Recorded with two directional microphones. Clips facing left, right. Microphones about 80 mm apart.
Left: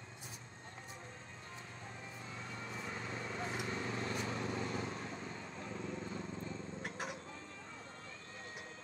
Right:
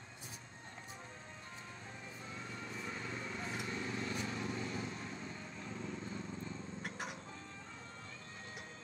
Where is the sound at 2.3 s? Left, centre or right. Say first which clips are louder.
Left 1 dB; left.